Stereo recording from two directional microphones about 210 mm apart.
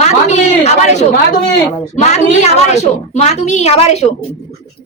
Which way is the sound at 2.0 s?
35° left (ahead or behind).